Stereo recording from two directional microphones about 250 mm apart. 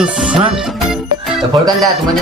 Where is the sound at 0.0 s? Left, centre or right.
Centre.